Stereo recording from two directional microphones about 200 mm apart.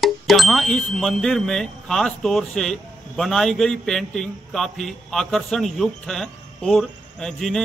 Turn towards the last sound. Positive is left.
turn(degrees=0)  # may be behind; listen again after turning